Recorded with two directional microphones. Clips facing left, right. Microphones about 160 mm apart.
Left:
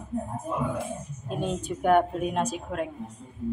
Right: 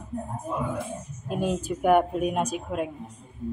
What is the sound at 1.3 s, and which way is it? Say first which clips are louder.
A woman's voice: right 3 dB; 5° right (ahead or behind).